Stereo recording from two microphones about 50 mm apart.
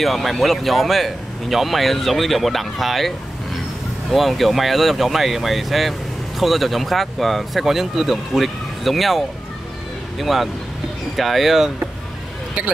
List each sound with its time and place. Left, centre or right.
0.0 s speech: centre
4.1 s speech: centre